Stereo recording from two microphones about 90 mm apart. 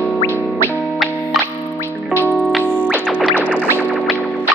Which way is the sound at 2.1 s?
20° left (ahead or behind).